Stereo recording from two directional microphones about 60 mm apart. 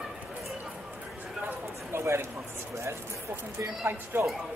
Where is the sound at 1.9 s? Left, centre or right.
Right.